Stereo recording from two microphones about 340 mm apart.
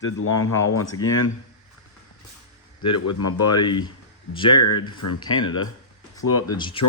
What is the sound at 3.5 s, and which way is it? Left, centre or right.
Speech, centre.